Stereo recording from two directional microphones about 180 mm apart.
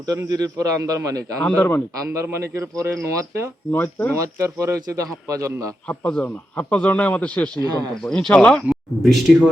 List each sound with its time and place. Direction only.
0.1 s a man's voice: 20° right (ahead or behind)
1.4 s a man's voice: 10° left (ahead or behind)
2.1 s a man's voice: 15° right (ahead or behind)
3.7 s a man's voice: 10° left (ahead or behind)
4.1 s a man's voice: 15° right (ahead or behind)
5.9 s a man's voice: 5° left (ahead or behind)